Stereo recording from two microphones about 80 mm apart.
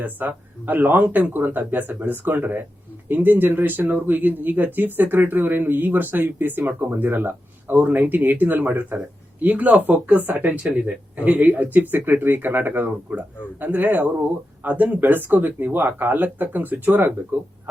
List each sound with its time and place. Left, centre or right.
0.0 s speech: right